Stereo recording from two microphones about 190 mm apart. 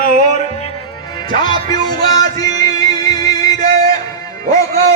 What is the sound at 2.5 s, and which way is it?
Music, 20° left (ahead or behind).